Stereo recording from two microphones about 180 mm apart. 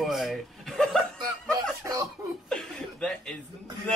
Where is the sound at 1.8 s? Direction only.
20° right (ahead or behind).